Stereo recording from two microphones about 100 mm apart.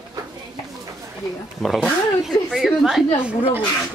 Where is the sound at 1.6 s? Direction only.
Centre (ahead or behind).